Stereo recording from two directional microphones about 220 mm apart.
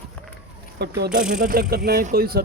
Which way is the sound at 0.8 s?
50° right (ahead or behind).